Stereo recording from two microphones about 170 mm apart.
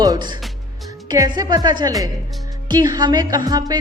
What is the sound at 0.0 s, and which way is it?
Music, 25° right (ahead or behind).